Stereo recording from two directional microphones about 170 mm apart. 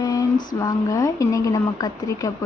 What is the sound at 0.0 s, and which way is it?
Female singing, 20° left (ahead or behind).